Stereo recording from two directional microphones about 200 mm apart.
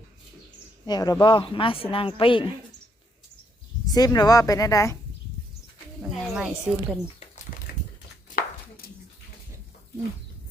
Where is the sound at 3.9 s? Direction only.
20° left (ahead or behind).